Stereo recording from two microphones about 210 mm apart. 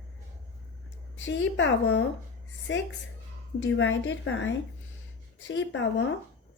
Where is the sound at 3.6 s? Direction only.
60° left (ahead or behind).